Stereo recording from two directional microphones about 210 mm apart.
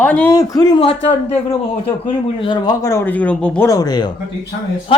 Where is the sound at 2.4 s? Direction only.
20° left (ahead or behind).